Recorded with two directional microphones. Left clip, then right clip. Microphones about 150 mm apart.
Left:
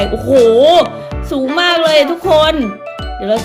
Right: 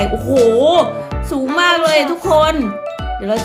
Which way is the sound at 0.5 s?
30° left (ahead or behind).